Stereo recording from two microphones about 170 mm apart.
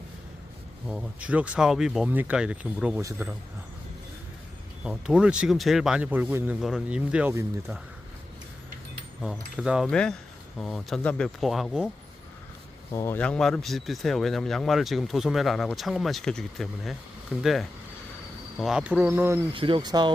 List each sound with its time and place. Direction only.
0.9 s speech: 5° right (ahead or behind)
4.8 s speech: 5° right (ahead or behind)
9.2 s speech: 5° right (ahead or behind)
12.9 s speech: 15° left (ahead or behind); by 19.5 s 15° right (ahead or behind)
19.5 s speech: 30° right (ahead or behind)